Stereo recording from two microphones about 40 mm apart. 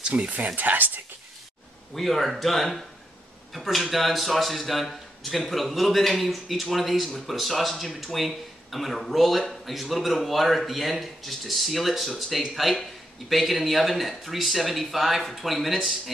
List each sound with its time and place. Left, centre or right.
0.1 s speech: right
0.6 s speech: right
2.0 s speech: centre